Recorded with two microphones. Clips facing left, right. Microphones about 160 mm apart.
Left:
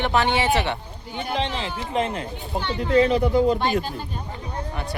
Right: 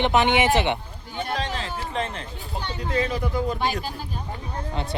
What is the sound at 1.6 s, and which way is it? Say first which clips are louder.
Speech: left 4 dB; 15° left (ahead or behind).